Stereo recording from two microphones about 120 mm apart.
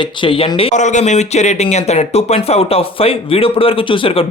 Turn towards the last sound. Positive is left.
turn(degrees=50)  # may be behind; listen again after turning